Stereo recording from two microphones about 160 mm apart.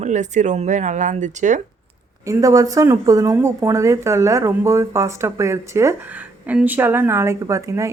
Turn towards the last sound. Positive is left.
turn(degrees=-20)  # may be behind; listen again after turning